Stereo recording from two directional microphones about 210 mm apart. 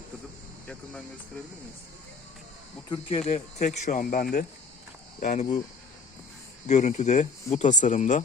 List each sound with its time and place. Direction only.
2.9 s speech: 30° left (ahead or behind)
6.7 s speech: 35° left (ahead or behind)